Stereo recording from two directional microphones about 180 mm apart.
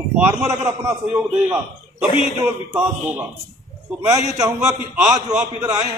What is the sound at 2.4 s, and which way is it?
A man's voice, 10° right (ahead or behind).